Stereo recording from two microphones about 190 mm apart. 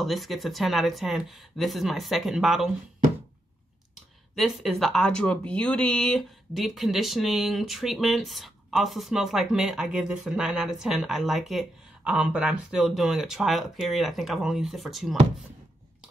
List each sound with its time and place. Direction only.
0.0 s speech: centre (ahead or behind)
4.4 s speech: centre (ahead or behind)